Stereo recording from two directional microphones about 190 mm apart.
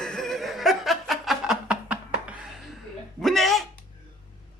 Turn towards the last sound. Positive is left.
turn(degrees=0)  # may be behind; listen again after turning